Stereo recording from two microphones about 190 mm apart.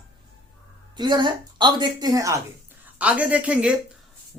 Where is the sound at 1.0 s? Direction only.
25° right (ahead or behind).